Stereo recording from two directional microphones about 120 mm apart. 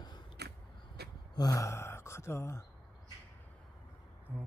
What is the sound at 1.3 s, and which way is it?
Speech, 30° left (ahead or behind).